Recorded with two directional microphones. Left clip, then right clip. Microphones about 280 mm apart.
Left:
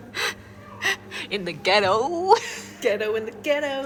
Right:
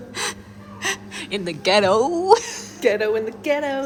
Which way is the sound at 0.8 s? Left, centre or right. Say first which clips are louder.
Left 1 dB; centre.